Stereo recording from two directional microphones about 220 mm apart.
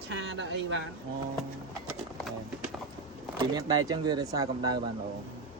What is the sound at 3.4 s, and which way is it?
Speech, 20° right (ahead or behind).